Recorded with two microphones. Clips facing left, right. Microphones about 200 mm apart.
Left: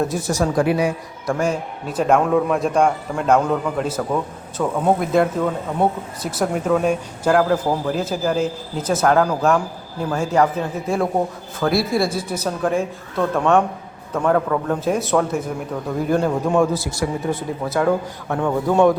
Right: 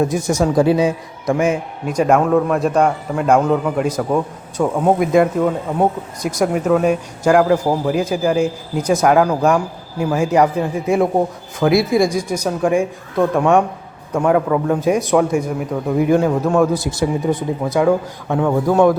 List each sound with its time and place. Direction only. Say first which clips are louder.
0.0 s a man's voice: right 4 dB; 15° right (ahead or behind)
0.3 s speech: right 4 dB; centre (ahead or behind)
0.5 s a man's voice: right 5 dB; 25° right (ahead or behind)